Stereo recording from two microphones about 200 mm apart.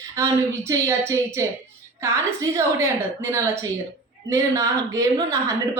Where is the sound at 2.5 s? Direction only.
15° right (ahead or behind).